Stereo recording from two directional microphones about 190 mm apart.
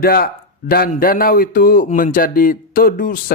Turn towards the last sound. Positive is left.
turn(degrees=50)  # may be behind; listen again after turning